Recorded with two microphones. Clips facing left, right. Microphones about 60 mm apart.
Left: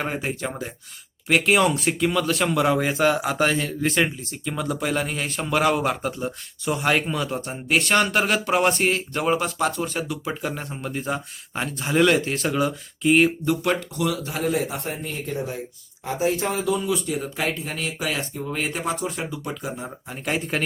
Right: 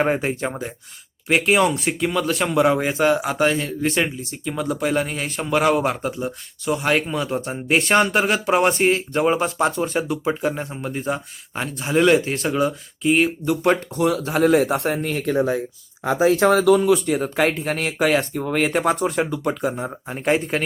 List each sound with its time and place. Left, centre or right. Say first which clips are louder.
0.2 s speech: right 4 dB; right
1.3 s speech: right 1 dB; centre
7.7 s speech: right 2 dB; right
7.9 s speech: right 3 dB; centre
13.6 s speech: right 5 dB; right
14.3 s speech: right 8 dB; right
17.1 s speech: right 6 dB; right